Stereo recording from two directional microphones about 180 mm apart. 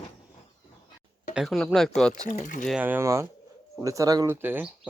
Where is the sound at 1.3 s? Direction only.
Centre (ahead or behind).